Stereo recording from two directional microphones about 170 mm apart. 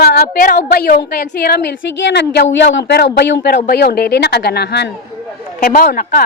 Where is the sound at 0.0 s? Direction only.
65° left (ahead or behind).